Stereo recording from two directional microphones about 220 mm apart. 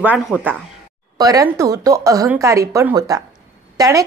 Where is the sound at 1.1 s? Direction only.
15° right (ahead or behind).